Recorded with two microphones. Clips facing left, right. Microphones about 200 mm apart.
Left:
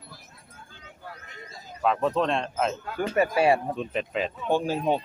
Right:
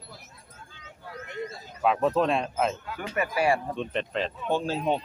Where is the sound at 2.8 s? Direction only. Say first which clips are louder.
Left 7 dB; 50° left (ahead or behind).